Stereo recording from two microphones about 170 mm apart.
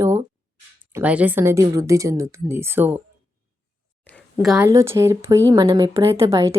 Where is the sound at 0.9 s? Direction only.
10° right (ahead or behind).